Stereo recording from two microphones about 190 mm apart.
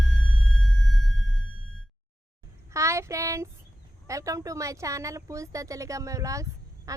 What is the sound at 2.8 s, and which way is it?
Speech, 15° right (ahead or behind).